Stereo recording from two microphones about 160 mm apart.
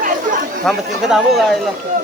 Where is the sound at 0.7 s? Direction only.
Centre (ahead or behind).